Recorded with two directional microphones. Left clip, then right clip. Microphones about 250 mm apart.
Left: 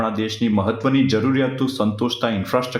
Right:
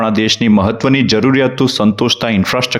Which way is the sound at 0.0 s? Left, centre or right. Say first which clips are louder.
Right 9 dB; right.